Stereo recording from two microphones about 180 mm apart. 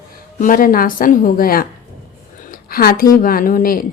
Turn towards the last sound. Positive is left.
turn(degrees=50)  # may be behind; listen again after turning